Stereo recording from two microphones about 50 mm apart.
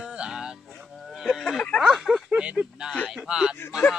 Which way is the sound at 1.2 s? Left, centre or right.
Centre.